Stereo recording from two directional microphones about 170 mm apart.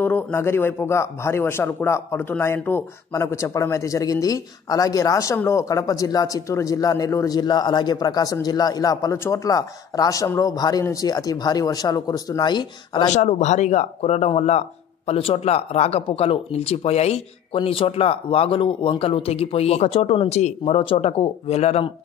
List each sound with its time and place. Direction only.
0.0 s a man's voice: 10° left (ahead or behind)
13.1 s speech: 45° left (ahead or behind)